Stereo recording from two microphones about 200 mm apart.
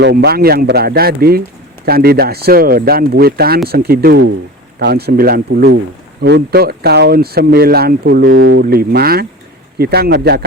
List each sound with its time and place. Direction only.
0.0 s speech: 55° right (ahead or behind)